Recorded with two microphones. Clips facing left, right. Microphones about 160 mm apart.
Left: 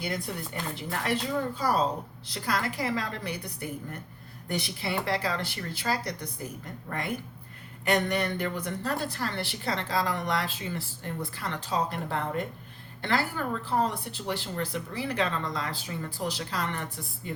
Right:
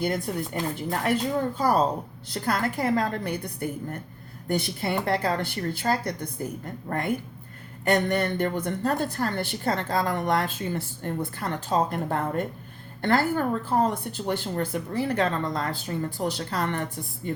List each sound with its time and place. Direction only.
0.3 s a woman's voice: 45° right (ahead or behind)
6.9 s speech: 40° right (ahead or behind)
8.1 s a woman's voice: 50° right (ahead or behind)